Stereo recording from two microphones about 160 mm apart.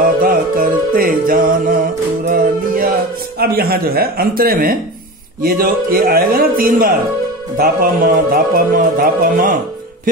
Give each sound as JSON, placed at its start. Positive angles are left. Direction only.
{"t": 0.0, "sound": "music", "side_deg": -60}
{"t": 3.3, "sound": "speech", "side_deg": -70}